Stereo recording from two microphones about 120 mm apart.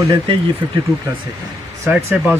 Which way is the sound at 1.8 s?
15° right (ahead or behind).